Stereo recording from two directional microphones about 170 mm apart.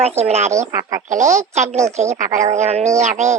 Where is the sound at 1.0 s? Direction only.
45° right (ahead or behind).